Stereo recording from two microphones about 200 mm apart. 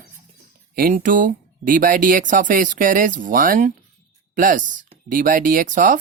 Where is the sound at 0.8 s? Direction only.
45° right (ahead or behind).